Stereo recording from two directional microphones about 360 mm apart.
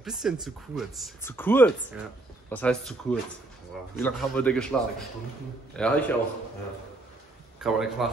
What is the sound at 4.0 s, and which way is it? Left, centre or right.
Speech, centre.